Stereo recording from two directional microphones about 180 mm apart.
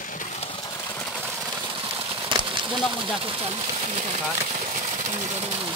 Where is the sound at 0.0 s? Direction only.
45° left (ahead or behind).